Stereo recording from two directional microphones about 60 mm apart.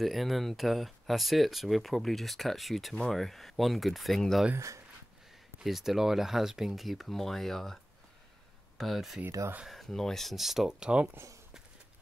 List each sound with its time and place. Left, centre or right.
0.0 s speech: centre
4.6 s speech: right
5.6 s speech: centre
10.3 s speech: centre